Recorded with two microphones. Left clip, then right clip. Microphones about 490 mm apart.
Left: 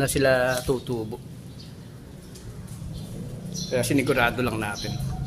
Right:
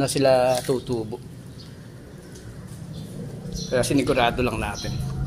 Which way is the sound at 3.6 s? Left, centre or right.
Left.